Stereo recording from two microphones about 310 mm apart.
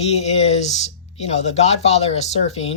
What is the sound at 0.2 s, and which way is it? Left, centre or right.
Speech, left.